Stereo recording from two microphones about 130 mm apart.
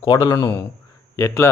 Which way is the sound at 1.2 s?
20° left (ahead or behind).